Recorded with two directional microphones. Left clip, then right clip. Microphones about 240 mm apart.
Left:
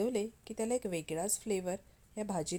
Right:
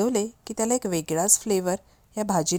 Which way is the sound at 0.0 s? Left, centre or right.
Right.